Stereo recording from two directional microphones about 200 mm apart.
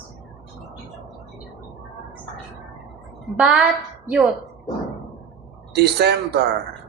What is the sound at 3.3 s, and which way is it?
Speech, 5° right (ahead or behind).